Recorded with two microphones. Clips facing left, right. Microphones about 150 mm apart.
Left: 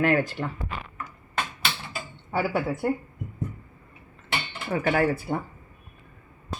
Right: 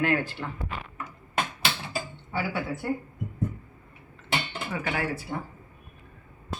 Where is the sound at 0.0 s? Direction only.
40° left (ahead or behind).